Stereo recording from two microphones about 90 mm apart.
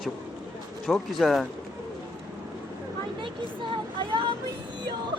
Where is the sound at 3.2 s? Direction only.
65° right (ahead or behind).